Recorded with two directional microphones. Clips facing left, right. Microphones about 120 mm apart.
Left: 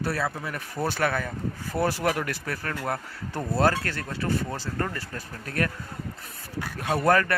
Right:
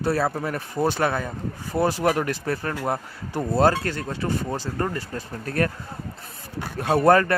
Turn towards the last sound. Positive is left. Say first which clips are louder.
# right 5 dB
turn(degrees=-30)  # may be behind; listen again after turning